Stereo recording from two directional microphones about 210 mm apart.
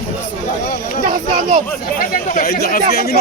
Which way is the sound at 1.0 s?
35° right (ahead or behind).